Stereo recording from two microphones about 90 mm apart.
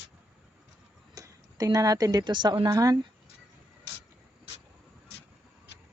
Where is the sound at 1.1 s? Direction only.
40° right (ahead or behind); by 2.6 s 55° right (ahead or behind).